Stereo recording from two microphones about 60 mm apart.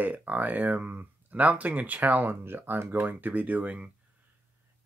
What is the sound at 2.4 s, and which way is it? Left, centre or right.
Speech, right.